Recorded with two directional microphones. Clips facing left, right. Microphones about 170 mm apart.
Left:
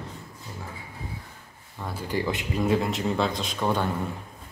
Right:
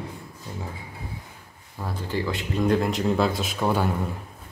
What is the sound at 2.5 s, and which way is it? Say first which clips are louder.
Speech: right 3 dB; 5° left (ahead or behind).